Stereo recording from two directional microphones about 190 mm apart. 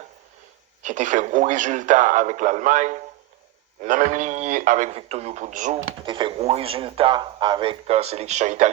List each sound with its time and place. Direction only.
0.8 s a man's voice: 40° right (ahead or behind)
6.0 s a man's voice: 25° right (ahead or behind)